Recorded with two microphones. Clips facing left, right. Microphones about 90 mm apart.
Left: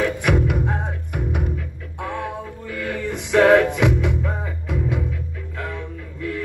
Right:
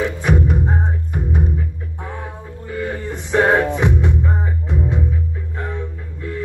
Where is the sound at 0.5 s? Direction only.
70° left (ahead or behind).